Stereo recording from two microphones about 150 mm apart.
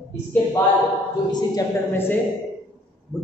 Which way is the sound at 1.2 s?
30° left (ahead or behind).